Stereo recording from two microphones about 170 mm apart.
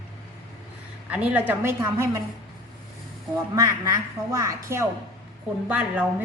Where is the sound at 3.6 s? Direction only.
20° right (ahead or behind).